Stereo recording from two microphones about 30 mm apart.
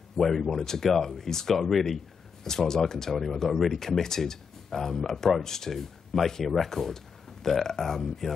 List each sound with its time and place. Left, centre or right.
0.2 s speech: centre
1.7 s speech: centre
2.4 s speech: centre
6.4 s speech: centre
6.7 s speech: centre